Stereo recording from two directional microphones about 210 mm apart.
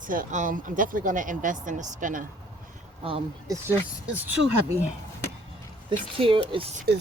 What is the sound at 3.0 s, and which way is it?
Speech, 25° right (ahead or behind).